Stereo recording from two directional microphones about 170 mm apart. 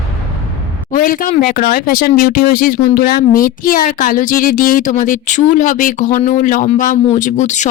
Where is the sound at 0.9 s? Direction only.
55° left (ahead or behind).